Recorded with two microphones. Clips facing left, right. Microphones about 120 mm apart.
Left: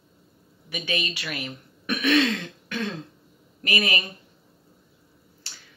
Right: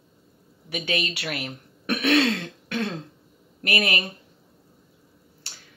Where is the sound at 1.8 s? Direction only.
60° right (ahead or behind).